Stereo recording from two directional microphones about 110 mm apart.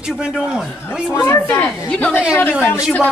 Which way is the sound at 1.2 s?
15° left (ahead or behind).